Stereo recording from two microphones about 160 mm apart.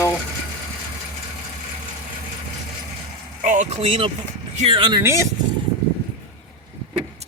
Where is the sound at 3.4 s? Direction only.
50° right (ahead or behind); by 5.0 s 30° right (ahead or behind).